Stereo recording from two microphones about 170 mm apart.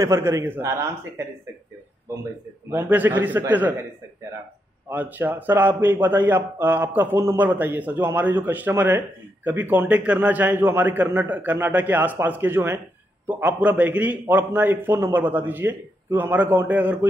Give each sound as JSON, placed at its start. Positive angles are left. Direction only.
{"t": 0.0, "sound": "a man's voice", "side_deg": -15}
{"t": 2.7, "sound": "a man's voice", "side_deg": -10}
{"t": 4.8, "sound": "a man's voice", "side_deg": -10}